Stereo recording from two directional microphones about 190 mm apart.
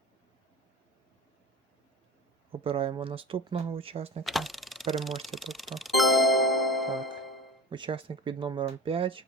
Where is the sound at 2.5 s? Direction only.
30° right (ahead or behind).